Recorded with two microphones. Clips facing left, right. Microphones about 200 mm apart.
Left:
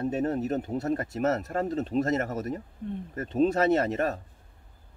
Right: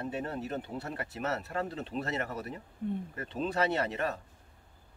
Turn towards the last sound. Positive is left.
turn(degrees=40)  # may be behind; listen again after turning